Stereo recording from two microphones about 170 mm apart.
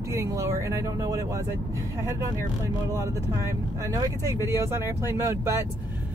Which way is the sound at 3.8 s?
20° right (ahead or behind).